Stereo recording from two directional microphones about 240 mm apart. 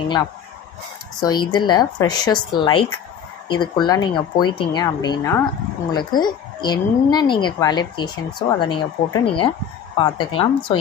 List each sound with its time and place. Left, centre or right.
1.2 s a woman's voice: centre